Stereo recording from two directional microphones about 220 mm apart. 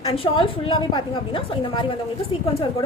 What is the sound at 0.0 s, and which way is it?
A woman's voice, 20° left (ahead or behind).